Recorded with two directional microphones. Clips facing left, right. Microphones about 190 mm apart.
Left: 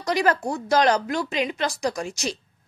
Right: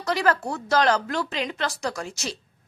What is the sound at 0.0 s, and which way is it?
A woman's voice, 15° left (ahead or behind).